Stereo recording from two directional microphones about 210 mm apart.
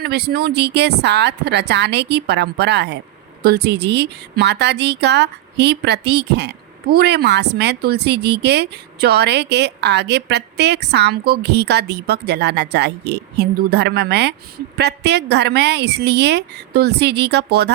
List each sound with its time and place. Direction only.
0.0 s speech: 50° right (ahead or behind)